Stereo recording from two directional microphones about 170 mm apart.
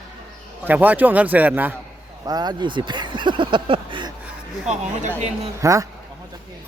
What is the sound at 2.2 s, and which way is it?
Speech, 25° right (ahead or behind).